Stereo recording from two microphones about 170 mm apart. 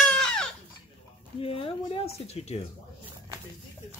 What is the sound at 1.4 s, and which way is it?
Speech, 35° left (ahead or behind).